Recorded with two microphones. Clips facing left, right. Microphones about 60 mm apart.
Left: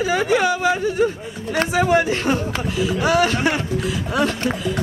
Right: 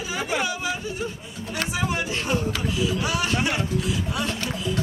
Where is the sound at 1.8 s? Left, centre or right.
Left.